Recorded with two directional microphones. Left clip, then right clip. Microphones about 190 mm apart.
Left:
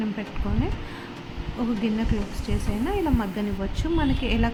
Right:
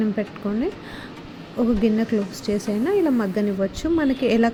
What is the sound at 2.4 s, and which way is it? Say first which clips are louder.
Speech: right 5 dB; 15° right (ahead or behind).